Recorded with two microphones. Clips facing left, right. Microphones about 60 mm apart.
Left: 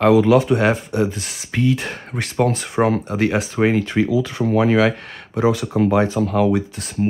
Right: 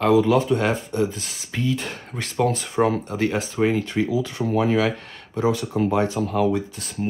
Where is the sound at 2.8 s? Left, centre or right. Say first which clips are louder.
Left 3 dB; left.